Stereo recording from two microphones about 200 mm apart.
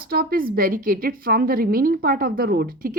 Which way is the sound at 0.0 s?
50° right (ahead or behind).